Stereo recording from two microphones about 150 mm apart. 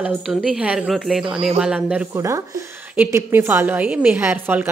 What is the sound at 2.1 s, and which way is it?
A woman's voice, 20° right (ahead or behind).